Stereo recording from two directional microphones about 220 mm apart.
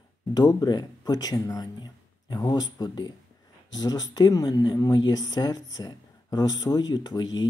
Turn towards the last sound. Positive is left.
turn(degrees=20)  # may be behind; listen again after turning